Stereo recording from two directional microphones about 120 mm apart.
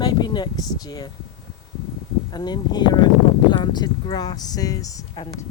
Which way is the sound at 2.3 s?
35° left (ahead or behind).